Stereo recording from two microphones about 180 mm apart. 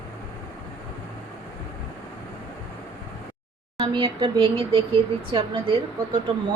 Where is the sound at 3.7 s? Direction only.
25° right (ahead or behind).